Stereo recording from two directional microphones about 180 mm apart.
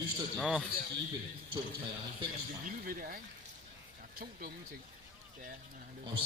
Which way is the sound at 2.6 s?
50° right (ahead or behind).